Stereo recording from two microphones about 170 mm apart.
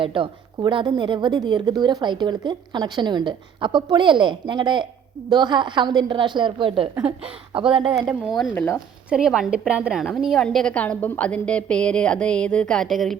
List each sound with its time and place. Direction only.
0.0 s a woman's voice: 30° right (ahead or behind)
7.0 s a woman's voice: 5° right (ahead or behind)
8.5 s speech: 15° left (ahead or behind)
9.0 s a woman's voice: 5° right (ahead or behind)